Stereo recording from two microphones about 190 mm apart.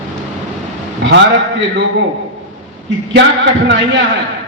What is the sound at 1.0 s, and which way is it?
Speech, 65° right (ahead or behind).